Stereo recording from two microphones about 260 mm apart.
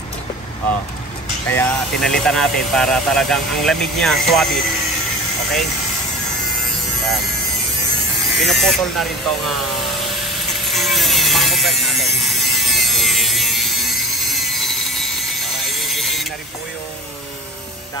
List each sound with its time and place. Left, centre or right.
1.5 s speech: centre
8.3 s speech: centre
10.0 s a sound: centre